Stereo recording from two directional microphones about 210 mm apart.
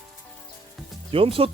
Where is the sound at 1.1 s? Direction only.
25° right (ahead or behind).